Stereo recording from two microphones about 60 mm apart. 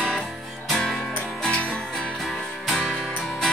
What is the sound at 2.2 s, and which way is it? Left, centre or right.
Music, centre.